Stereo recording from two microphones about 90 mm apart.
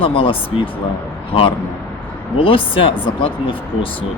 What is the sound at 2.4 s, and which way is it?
Speech, 85° left.